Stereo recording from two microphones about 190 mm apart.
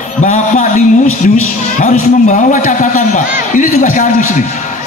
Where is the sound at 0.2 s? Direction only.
40° left (ahead or behind).